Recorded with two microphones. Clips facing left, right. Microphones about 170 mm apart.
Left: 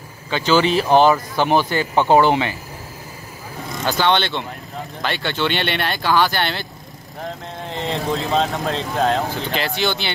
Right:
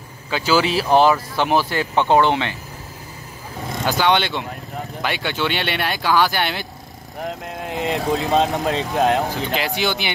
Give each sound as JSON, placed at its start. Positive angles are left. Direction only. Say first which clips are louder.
{"t": 0.3, "sound": "speech", "louder": "left 2 dB", "side_deg": -5}
{"t": 3.8, "sound": "speech", "louder": "even", "side_deg": -10}
{"t": 7.7, "sound": "speech", "louder": "right 2 dB", "side_deg": -15}